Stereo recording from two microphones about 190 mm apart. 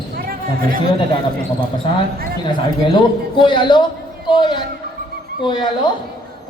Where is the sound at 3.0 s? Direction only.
25° left (ahead or behind).